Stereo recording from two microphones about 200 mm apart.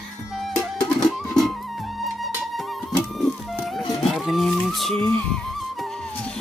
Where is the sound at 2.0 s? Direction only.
Centre (ahead or behind).